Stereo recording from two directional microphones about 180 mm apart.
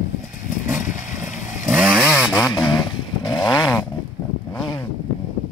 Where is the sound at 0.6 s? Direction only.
10° right (ahead or behind).